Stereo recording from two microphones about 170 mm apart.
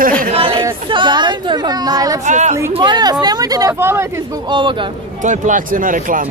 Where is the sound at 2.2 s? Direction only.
45° right (ahead or behind).